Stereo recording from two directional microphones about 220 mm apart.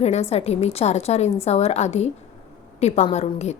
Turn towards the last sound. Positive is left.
turn(degrees=30)  # may be behind; listen again after turning